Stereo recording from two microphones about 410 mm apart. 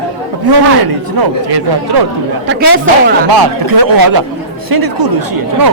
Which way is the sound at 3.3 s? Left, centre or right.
Right.